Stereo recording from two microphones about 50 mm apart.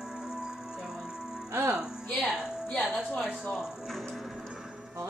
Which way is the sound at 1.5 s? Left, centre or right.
Right.